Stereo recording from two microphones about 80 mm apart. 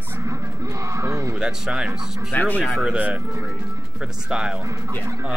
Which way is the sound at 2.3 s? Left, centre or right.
Left.